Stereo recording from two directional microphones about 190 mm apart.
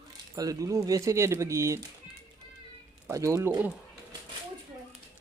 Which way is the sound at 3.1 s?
15° right (ahead or behind).